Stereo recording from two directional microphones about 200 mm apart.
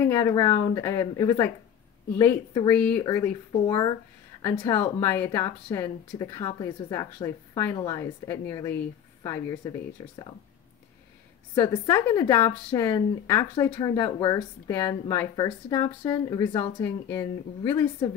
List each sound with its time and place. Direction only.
0.1 s a woman's voice: 15° left (ahead or behind)
11.5 s a woman's voice: 20° left (ahead or behind)